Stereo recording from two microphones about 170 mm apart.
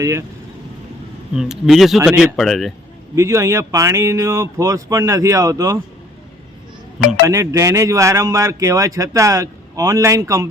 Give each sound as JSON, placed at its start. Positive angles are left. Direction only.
{"t": 0.0, "sound": "speech", "side_deg": -15}
{"t": 1.4, "sound": "speech", "side_deg": 0}
{"t": 3.2, "sound": "speech", "side_deg": -15}
{"t": 7.3, "sound": "speech", "side_deg": -20}